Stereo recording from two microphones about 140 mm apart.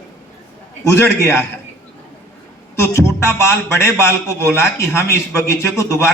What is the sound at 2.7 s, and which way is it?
A man's voice, 20° left (ahead or behind).